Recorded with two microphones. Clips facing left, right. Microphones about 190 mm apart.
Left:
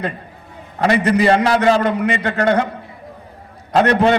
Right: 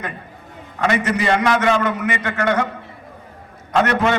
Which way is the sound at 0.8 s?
35° left (ahead or behind).